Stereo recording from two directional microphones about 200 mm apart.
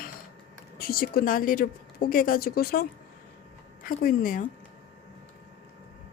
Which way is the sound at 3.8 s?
45° left (ahead or behind).